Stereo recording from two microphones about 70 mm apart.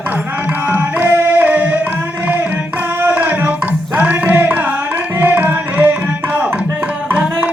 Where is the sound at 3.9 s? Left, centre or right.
Right.